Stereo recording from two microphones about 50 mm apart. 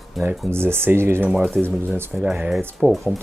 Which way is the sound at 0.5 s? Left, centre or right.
Right.